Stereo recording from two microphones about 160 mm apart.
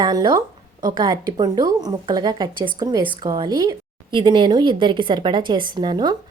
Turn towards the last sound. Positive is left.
turn(degrees=-25)  # may be behind; listen again after turning